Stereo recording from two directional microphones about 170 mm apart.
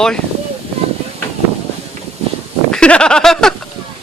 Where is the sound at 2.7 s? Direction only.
5° left (ahead or behind).